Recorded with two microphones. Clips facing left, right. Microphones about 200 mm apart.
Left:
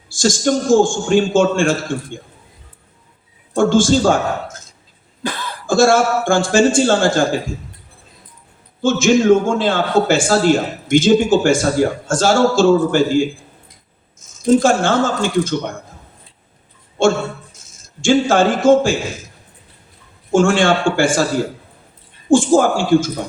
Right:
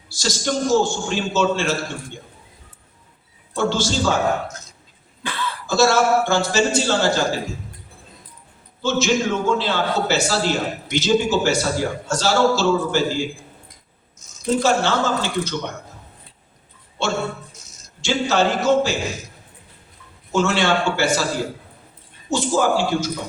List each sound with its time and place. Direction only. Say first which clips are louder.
0.1 s a man's voice: left 7 dB; 50° left (ahead or behind)
3.5 s a man's voice: left 8 dB; 50° left (ahead or behind)
5.2 s speech: left 3 dB; 40° left (ahead or behind)
8.8 s a man's voice: left 6 dB; 50° left (ahead or behind)
14.6 s a man's voice: left 4 dB; 50° left (ahead or behind)
17.0 s a man's voice: left 8 dB; 50° left (ahead or behind)
20.3 s a man's voice: left 6 dB; 50° left (ahead or behind)
22.3 s a man's voice: left 7 dB; 50° left (ahead or behind)